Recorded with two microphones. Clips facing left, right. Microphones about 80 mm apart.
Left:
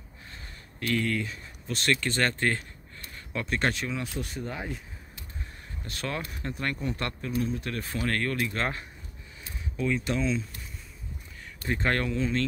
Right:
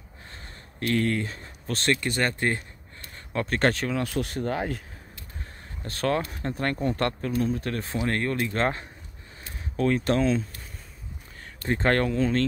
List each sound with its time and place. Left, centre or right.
0.3 s a sound: right
1.9 s speech: centre
3.3 s speech: right
4.4 s speech: right
5.9 s speech: right
7.9 s speech: right
9.8 s speech: right
11.6 s speech: right